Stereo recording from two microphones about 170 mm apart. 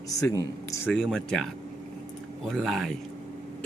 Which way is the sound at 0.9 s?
5° left (ahead or behind).